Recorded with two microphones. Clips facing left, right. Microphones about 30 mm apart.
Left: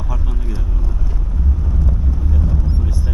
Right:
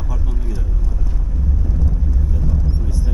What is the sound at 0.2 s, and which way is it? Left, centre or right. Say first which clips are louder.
Vehicle: left 1 dB; left.